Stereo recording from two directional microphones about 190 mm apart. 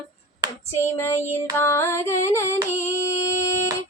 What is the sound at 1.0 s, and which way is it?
Music, 15° left (ahead or behind).